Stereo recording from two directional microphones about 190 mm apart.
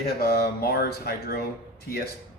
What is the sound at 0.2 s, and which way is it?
Speech, 55° left (ahead or behind).